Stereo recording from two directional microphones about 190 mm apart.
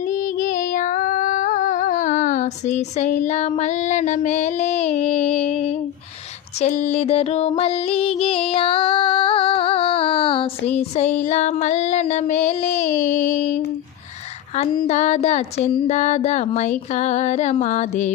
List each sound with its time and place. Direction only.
0.0 s female singing: 40° left (ahead or behind)
14.8 s music: 40° left (ahead or behind)